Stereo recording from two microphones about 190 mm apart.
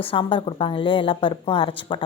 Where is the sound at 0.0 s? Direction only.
30° left (ahead or behind).